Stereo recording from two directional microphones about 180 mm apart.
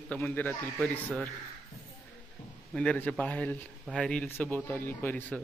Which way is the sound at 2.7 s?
5° left (ahead or behind).